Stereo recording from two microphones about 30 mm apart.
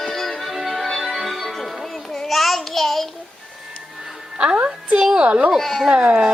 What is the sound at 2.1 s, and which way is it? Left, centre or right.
Child singing, centre.